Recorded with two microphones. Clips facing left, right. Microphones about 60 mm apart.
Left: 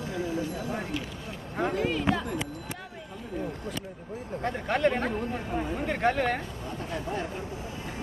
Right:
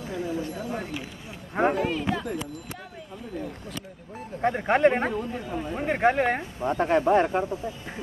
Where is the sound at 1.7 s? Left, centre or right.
Centre.